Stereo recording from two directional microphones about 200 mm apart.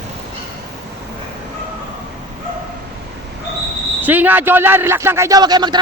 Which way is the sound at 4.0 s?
10° right (ahead or behind).